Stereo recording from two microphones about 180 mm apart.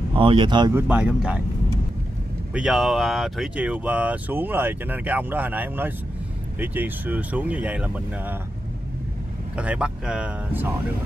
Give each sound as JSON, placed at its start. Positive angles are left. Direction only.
{"t": 0.1, "sound": "speech", "side_deg": -30}
{"t": 0.7, "sound": "speech", "side_deg": -10}
{"t": 2.5, "sound": "speech", "side_deg": -5}
{"t": 9.6, "sound": "speech", "side_deg": -5}